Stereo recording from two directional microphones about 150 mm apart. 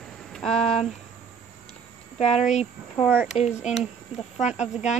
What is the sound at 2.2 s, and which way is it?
Speech, 50° left (ahead or behind).